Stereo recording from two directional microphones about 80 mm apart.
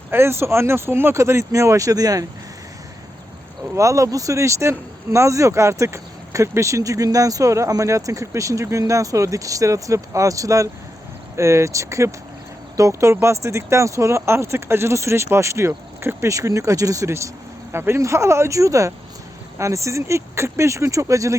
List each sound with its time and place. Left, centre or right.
0.1 s speech: right
3.8 s speech: right